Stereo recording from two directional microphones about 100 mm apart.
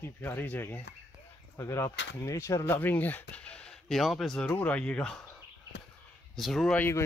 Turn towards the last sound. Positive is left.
turn(degrees=25)  # may be behind; listen again after turning